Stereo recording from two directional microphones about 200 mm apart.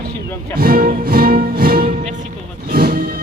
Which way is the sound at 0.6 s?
45° right (ahead or behind).